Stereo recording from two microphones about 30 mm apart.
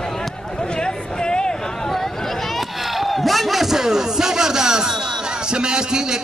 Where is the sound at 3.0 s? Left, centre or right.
Centre; by 4.8 s right.